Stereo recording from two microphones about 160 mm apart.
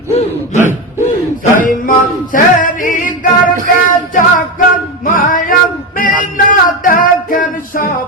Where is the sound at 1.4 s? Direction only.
55° left (ahead or behind).